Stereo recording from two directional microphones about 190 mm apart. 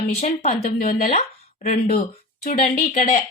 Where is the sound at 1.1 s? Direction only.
40° left (ahead or behind).